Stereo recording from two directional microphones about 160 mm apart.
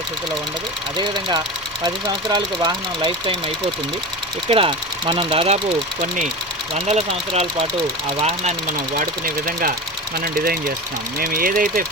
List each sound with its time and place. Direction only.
0.9 s speech: 30° right (ahead or behind)
4.4 s speech: 35° right (ahead or behind)
6.7 s speech: 45° right (ahead or behind)
9.0 s speech: 60° right (ahead or behind)
11.2 s speech: 65° right (ahead or behind)